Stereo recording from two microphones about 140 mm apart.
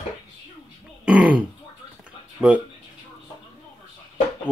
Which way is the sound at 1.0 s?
10° right (ahead or behind).